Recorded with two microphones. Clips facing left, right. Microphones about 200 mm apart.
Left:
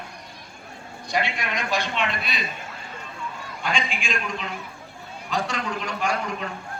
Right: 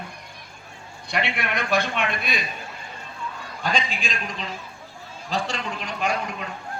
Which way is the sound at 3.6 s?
40° right (ahead or behind).